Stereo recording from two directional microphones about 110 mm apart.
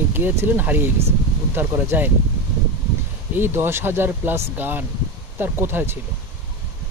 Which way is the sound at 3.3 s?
20° right (ahead or behind).